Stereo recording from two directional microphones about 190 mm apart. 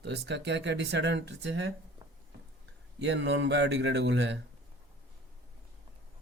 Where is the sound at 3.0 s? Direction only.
65° right (ahead or behind).